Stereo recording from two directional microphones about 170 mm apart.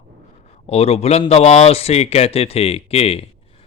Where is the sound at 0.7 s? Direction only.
35° left (ahead or behind).